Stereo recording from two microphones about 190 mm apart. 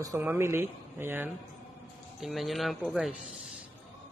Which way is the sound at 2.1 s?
Centre (ahead or behind).